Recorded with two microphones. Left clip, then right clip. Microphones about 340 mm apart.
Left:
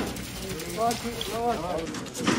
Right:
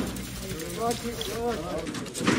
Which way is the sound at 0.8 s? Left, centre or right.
Centre.